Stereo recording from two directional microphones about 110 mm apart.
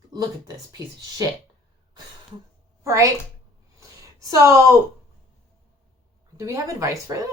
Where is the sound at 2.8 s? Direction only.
25° right (ahead or behind).